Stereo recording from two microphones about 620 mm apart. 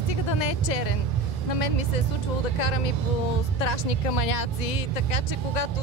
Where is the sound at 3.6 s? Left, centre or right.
Left.